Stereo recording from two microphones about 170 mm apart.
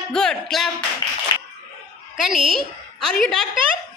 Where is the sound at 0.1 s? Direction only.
5° left (ahead or behind).